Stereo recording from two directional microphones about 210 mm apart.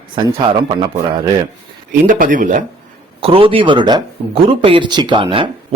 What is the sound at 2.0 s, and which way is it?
Speech, 40° right (ahead or behind).